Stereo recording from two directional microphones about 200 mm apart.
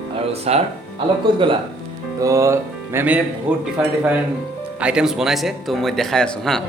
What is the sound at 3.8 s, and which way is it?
Speech, 5° right (ahead or behind).